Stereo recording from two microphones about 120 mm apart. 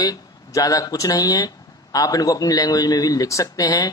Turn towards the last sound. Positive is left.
turn(degrees=30)  # may be behind; listen again after turning